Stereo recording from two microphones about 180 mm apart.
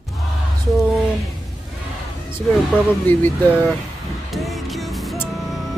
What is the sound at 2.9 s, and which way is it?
Speech, 10° left (ahead or behind).